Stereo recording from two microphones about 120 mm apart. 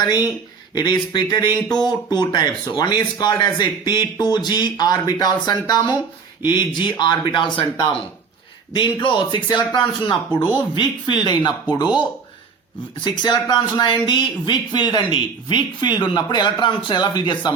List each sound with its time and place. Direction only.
0.0 s speech: 35° left (ahead or behind)
13.2 s speech: 35° left (ahead or behind)